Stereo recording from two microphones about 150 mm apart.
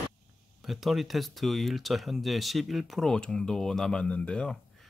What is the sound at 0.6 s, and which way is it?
Speech, centre (ahead or behind).